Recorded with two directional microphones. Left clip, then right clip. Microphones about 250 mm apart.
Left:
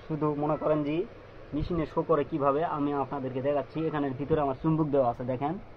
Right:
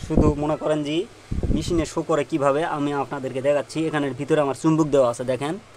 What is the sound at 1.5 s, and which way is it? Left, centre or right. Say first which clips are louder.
Speech: right 5 dB; right.